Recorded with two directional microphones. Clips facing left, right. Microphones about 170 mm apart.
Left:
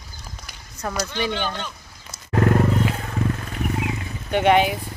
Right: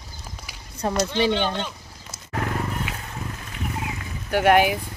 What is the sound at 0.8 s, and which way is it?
Speech, 25° right (ahead or behind).